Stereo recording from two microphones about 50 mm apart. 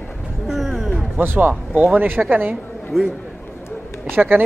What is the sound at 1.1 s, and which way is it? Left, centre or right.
Speech, right.